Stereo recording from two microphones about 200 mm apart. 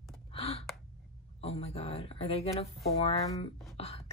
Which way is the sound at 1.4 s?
30° left (ahead or behind).